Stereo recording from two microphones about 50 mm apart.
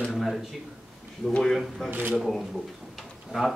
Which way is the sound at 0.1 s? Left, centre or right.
Centre.